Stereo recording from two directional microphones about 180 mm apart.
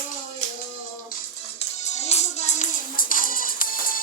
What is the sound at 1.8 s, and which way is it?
Music, 40° left (ahead or behind).